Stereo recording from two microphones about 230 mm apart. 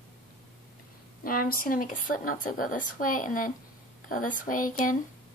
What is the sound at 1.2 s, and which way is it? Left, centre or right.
Speech, left.